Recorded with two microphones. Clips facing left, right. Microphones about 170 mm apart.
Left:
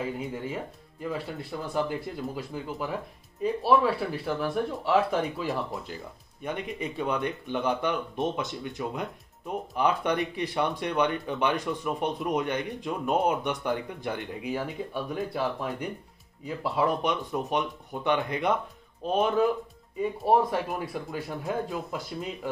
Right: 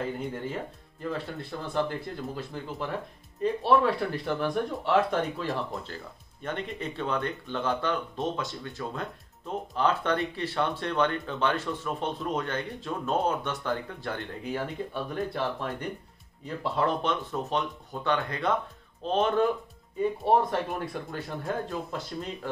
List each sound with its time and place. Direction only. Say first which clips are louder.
0.0 s speech: even; 5° left (ahead or behind)